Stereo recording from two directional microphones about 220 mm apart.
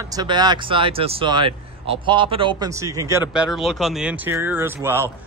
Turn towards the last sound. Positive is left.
turn(degrees=-10)  # may be behind; listen again after turning